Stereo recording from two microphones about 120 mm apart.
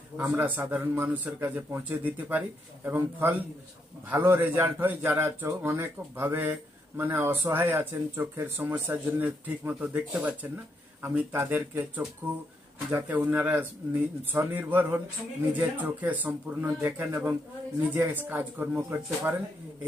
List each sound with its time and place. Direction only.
0.2 s a man's voice: 15° right (ahead or behind)